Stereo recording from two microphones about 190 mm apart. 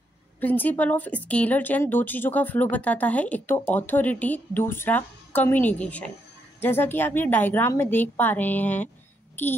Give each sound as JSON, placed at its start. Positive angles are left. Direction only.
{"t": 0.4, "sound": "speech", "side_deg": 10}